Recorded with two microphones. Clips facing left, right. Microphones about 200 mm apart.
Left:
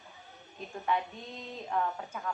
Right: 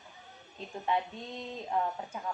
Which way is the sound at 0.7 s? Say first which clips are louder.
Even; 15° right (ahead or behind).